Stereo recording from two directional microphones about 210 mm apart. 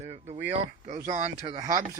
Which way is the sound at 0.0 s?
30° right (ahead or behind).